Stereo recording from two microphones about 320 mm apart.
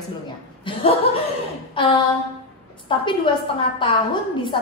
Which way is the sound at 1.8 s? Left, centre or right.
Centre.